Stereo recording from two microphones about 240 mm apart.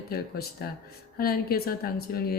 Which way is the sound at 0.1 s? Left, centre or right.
Left.